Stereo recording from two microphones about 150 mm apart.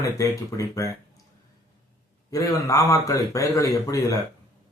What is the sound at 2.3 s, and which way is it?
Speech, 25° left (ahead or behind).